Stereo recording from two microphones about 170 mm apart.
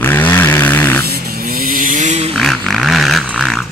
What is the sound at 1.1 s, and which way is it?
Vehicle, 65° right (ahead or behind).